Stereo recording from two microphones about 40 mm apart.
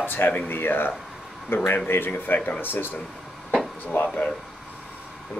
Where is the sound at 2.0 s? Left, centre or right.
Left.